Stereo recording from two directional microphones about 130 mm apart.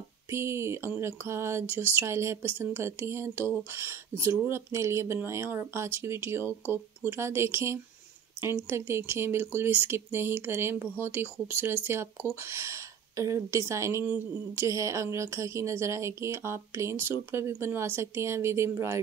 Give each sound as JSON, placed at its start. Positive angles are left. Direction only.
{"t": 0.3, "sound": "a woman's voice", "side_deg": -20}